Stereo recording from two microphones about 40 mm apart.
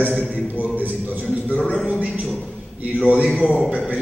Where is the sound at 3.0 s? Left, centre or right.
Right.